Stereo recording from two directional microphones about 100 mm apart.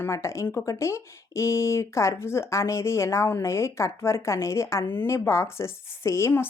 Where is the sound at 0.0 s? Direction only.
30° left (ahead or behind).